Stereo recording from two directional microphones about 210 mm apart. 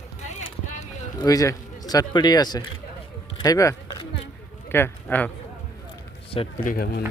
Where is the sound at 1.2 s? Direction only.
15° left (ahead or behind).